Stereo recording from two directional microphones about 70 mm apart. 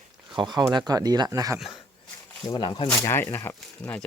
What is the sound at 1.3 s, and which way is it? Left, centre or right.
Speech, right.